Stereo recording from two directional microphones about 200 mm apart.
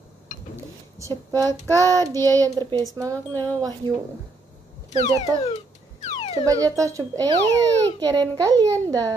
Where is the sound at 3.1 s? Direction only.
10° left (ahead or behind).